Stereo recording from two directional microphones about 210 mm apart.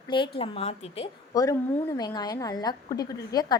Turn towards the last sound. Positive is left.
turn(degrees=20)  # may be behind; listen again after turning